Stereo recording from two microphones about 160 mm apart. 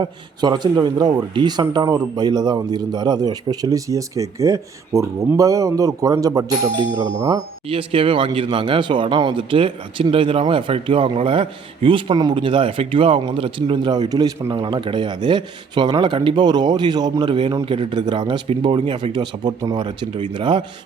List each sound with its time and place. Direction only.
0.0 s speech: 25° right (ahead or behind)